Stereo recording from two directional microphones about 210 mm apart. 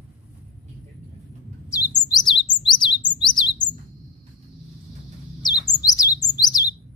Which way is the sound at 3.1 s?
20° left (ahead or behind).